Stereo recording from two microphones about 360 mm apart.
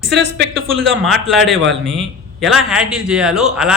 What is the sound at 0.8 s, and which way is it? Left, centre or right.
A man's voice, centre.